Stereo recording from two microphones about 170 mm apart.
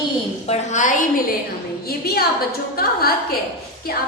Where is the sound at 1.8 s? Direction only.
65° left (ahead or behind).